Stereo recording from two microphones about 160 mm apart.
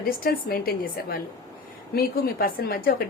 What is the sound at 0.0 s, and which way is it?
A woman's voice, 65° left (ahead or behind).